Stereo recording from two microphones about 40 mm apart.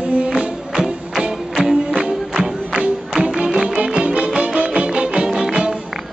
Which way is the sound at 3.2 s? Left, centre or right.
Right.